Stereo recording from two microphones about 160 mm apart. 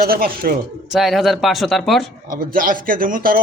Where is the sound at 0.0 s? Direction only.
70° right (ahead or behind).